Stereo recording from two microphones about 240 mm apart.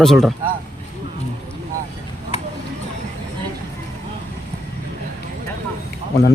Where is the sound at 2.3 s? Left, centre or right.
Left.